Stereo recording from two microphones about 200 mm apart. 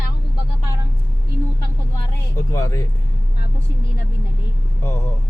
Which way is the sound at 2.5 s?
15° left (ahead or behind).